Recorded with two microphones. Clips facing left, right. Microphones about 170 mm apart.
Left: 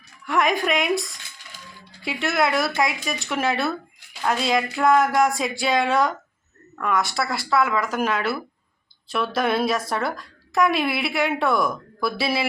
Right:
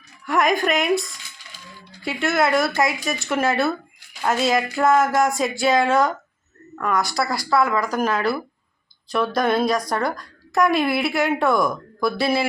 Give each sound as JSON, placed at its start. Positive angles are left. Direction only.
{"t": 0.3, "sound": "a woman's voice", "side_deg": 0}